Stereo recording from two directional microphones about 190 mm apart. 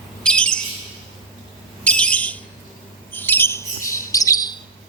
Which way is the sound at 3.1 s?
10° left (ahead or behind).